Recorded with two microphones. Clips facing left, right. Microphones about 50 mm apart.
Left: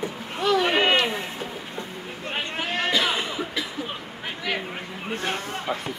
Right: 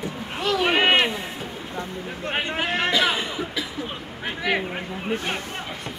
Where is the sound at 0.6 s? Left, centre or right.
Right.